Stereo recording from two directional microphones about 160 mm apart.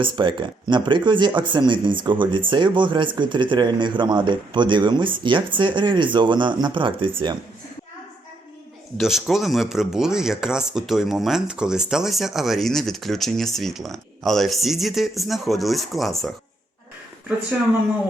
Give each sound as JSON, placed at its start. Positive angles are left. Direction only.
{"t": 0.0, "sound": "speech", "side_deg": -30}
{"t": 9.0, "sound": "speech", "side_deg": 0}